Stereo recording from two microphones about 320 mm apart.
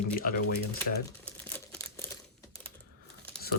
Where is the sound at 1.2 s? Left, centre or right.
Centre.